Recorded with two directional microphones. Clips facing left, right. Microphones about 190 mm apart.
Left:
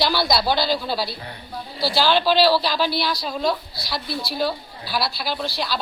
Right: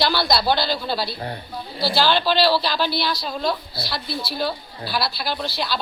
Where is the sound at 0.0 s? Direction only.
10° left (ahead or behind).